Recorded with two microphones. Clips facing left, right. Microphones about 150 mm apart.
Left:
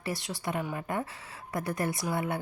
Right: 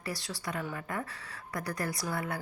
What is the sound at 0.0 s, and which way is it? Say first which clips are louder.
A woman's voice: left 4 dB; 25° left (ahead or behind).